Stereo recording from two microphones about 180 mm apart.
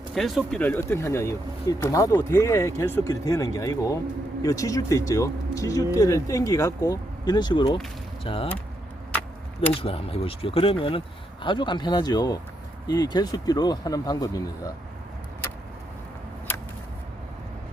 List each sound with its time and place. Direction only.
0.1 s speech: centre (ahead or behind); by 8.4 s 30° left (ahead or behind)
9.8 s speech: 30° left (ahead or behind)